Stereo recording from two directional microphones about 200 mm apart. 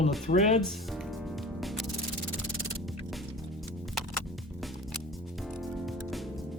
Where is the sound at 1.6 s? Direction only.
Centre (ahead or behind).